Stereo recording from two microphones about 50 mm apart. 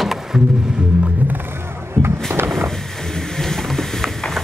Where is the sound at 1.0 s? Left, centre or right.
Right.